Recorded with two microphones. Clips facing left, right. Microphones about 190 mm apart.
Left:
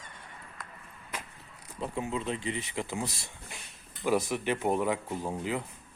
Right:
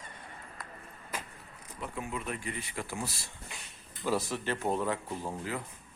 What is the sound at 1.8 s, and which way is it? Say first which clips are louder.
Speech: left 5 dB; 25° left (ahead or behind).